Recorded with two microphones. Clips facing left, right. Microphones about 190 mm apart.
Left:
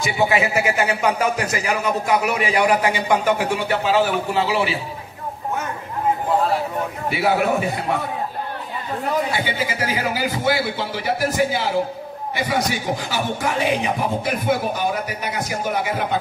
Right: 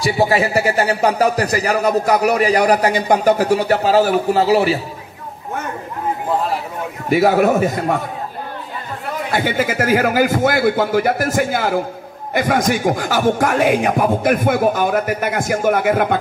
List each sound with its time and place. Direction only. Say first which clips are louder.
0.0 s a man's voice: right 4 dB; 35° right (ahead or behind)
7.1 s speech: right 7 dB; 45° right (ahead or behind)
9.3 s speech: right 5 dB; 50° right (ahead or behind)